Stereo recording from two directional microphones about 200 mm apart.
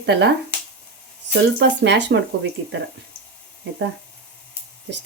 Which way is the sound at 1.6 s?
60° right (ahead or behind).